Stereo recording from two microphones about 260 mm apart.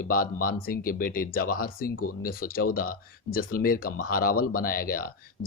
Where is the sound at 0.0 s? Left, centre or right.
Left.